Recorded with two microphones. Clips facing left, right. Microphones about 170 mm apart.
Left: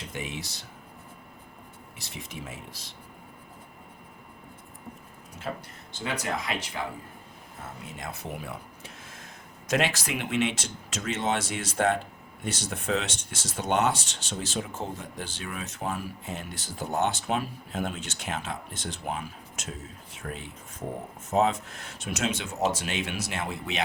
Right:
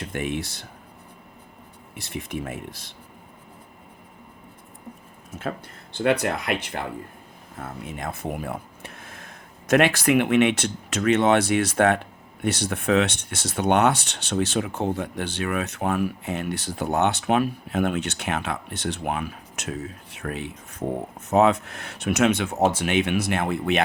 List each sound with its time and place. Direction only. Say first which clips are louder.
0.0 s speech: right 8 dB; 55° right (ahead or behind)
2.0 s speech: right 10 dB; 55° right (ahead or behind)
5.4 s speech: right 4 dB; 55° right (ahead or behind)